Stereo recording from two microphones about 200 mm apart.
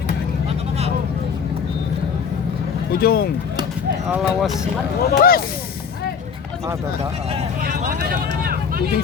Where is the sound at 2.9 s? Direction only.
50° left (ahead or behind).